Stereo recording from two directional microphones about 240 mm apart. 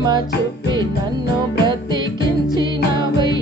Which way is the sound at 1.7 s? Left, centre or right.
Centre.